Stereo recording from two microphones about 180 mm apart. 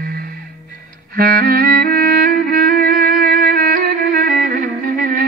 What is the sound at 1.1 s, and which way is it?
Music, 55° right (ahead or behind).